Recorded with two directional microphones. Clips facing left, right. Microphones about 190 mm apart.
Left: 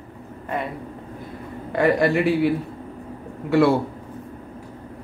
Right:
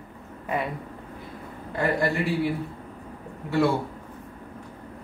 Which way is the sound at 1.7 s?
75° left (ahead or behind).